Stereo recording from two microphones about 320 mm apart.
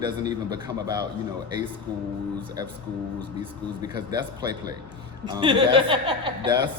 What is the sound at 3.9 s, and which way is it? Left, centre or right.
A man's voice, centre.